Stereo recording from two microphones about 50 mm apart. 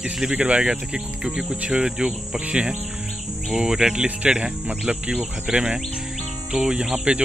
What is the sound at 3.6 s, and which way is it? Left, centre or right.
Insect, centre.